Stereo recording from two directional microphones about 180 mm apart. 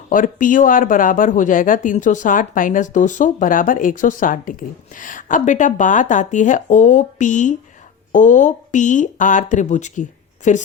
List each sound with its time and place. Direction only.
0.1 s speech: 50° left (ahead or behind)